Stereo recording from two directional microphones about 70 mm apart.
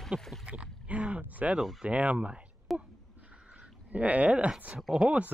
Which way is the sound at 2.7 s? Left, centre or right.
Centre.